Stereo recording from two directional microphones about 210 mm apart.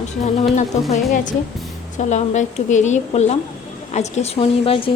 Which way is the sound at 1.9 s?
35° left (ahead or behind).